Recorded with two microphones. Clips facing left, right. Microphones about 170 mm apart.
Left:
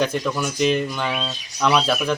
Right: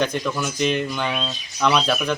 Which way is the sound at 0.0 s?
5° left (ahead or behind).